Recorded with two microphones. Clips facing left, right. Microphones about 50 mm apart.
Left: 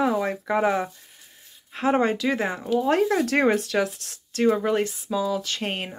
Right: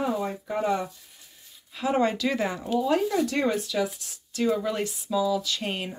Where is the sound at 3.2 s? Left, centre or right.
Left.